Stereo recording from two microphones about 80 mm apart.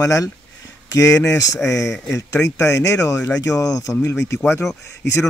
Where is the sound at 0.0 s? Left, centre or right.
Left.